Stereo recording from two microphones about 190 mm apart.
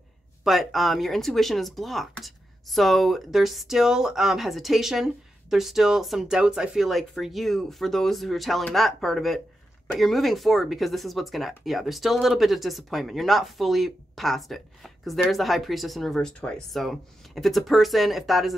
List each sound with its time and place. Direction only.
0.4 s speech: centre (ahead or behind)